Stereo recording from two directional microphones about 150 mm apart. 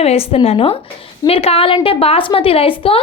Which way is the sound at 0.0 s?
40° left (ahead or behind).